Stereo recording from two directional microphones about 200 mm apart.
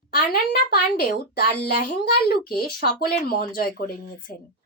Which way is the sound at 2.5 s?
50° left (ahead or behind).